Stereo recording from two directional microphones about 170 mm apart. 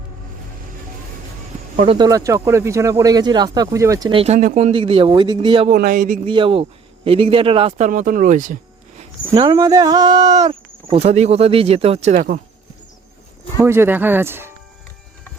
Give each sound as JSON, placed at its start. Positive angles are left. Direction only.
{"t": 1.9, "sound": "speech", "side_deg": -25}
{"t": 4.1, "sound": "speech", "side_deg": -35}
{"t": 4.4, "sound": "speech", "side_deg": -50}
{"t": 4.7, "sound": "speech", "side_deg": -30}
{"t": 5.7, "sound": "speech", "side_deg": -55}
{"t": 6.2, "sound": "speech", "side_deg": -30}
{"t": 7.9, "sound": "speech", "side_deg": -50}
{"t": 9.3, "sound": "speech", "side_deg": -25}
{"t": 10.5, "sound": "speech", "side_deg": -35}
{"t": 13.6, "sound": "speech", "side_deg": -15}